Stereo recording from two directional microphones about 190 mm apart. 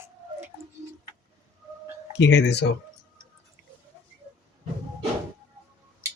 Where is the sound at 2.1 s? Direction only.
65° left (ahead or behind).